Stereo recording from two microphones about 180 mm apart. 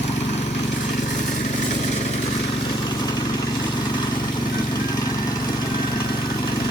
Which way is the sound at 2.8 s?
25° left (ahead or behind).